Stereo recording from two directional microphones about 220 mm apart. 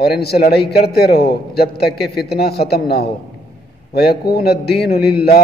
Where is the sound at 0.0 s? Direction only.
45° left (ahead or behind).